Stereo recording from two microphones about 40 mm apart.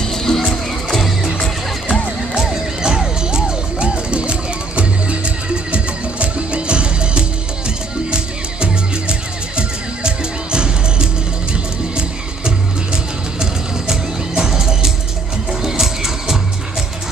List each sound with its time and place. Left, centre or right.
0.0 s music: centre
1.4 s music: left
2.5 s music: centre
12.4 s music: centre